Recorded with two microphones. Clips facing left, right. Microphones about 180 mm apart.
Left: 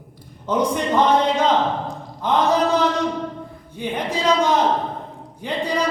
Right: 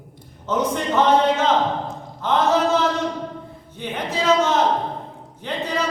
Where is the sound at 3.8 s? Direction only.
15° left (ahead or behind).